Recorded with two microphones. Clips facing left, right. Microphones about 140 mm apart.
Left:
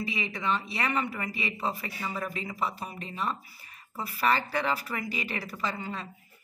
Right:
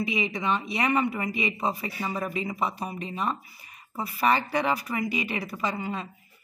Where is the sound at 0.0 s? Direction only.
15° right (ahead or behind).